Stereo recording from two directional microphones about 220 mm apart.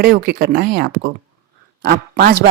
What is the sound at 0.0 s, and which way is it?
A woman's voice, 45° right (ahead or behind).